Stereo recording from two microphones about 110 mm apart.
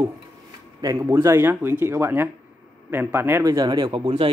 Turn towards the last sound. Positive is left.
turn(degrees=-50)  # may be behind; listen again after turning